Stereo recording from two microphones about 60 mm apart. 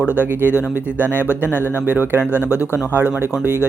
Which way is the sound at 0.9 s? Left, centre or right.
Right.